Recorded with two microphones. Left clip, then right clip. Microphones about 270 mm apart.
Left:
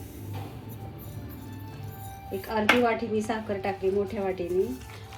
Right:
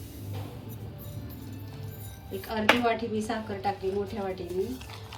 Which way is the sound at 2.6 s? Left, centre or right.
Centre.